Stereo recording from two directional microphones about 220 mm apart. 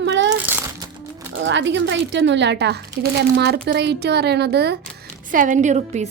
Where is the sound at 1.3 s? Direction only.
55° right (ahead or behind).